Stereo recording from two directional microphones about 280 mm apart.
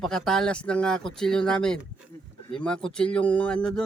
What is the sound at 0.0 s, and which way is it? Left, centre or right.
Speech, centre.